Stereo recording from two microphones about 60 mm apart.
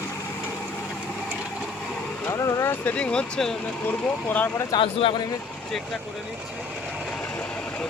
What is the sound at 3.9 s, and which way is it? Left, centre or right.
Speech, left.